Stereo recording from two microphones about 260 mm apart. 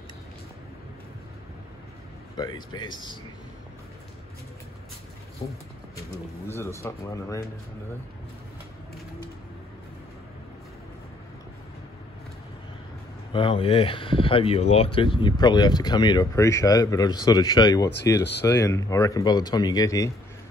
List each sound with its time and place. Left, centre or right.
2.3 s speech: centre
5.4 s speech: centre
13.3 s speech: centre